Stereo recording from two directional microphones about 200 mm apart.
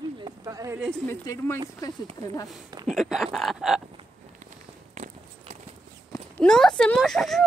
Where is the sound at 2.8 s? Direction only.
Centre (ahead or behind).